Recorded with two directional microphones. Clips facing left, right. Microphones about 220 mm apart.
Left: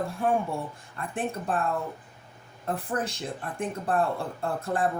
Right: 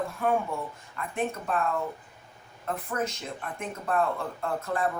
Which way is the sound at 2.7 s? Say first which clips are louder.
Left 1 dB; 30° left (ahead or behind).